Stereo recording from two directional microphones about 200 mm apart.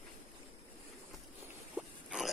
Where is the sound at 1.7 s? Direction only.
5° right (ahead or behind).